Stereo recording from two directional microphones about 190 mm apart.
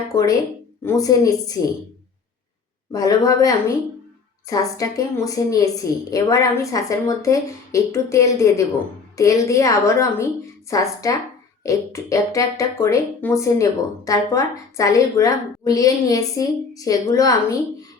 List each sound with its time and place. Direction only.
0.1 s a woman's voice: 15° left (ahead or behind)
2.9 s speech: 20° left (ahead or behind)